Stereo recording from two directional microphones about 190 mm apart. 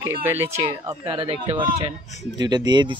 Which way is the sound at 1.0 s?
25° right (ahead or behind).